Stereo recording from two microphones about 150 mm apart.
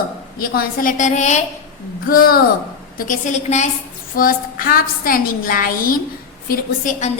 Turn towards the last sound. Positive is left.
turn(degrees=60)  # may be behind; listen again after turning